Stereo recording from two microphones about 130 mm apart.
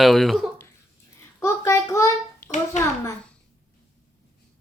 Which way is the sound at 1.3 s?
20° left (ahead or behind).